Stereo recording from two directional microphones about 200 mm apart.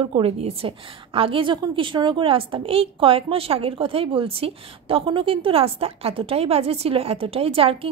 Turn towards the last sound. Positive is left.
turn(degrees=-30)  # may be behind; listen again after turning